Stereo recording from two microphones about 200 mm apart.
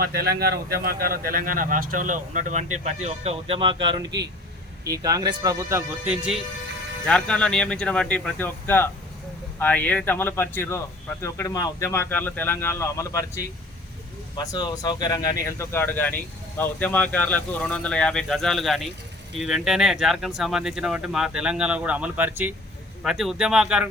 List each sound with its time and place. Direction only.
0.0 s speech: 50° right (ahead or behind); by 23.9 s 5° right (ahead or behind)